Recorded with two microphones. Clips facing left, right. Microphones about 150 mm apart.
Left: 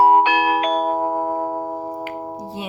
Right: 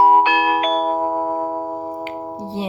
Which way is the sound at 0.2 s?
90° right.